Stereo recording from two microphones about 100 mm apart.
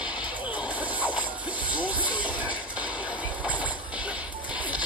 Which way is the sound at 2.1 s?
15° right (ahead or behind).